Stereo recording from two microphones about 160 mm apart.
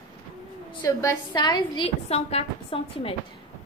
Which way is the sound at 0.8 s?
20° left (ahead or behind).